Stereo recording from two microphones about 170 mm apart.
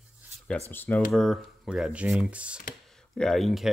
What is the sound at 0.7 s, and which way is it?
Speech, 10° left (ahead or behind).